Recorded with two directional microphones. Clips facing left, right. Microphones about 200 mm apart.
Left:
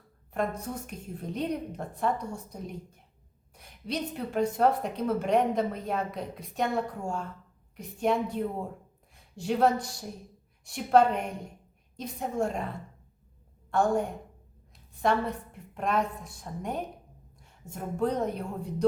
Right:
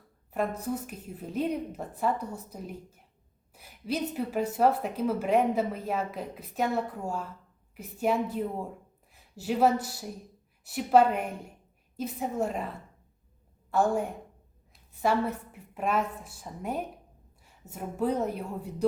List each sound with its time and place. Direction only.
0.3 s a woman's voice: 5° right (ahead or behind)